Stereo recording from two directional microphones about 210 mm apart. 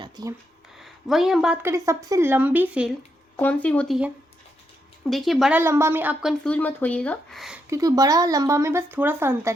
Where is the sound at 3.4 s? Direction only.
5° left (ahead or behind).